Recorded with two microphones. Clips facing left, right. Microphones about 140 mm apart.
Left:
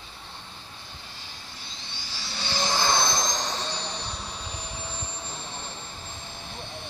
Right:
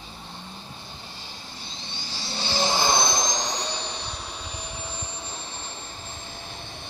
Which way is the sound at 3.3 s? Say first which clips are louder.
Right 1 dB; 15° right (ahead or behind).